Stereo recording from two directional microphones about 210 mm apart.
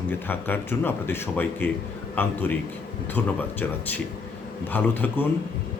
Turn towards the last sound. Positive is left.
turn(degrees=10)  # may be behind; listen again after turning